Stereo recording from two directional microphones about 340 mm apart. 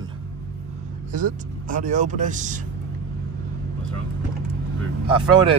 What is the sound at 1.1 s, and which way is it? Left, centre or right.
Speech, right.